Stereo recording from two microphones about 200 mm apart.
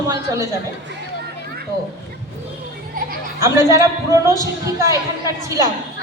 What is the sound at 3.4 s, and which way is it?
A man's voice, 15° right (ahead or behind).